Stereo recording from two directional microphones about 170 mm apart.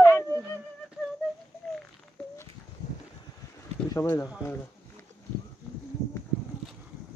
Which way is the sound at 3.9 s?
15° left (ahead or behind).